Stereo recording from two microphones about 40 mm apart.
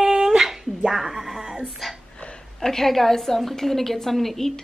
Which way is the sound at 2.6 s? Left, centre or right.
Centre.